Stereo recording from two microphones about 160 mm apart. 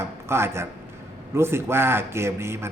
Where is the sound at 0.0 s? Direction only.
15° right (ahead or behind).